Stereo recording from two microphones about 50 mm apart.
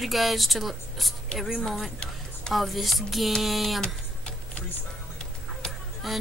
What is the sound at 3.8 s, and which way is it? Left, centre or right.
Tick-tock, left.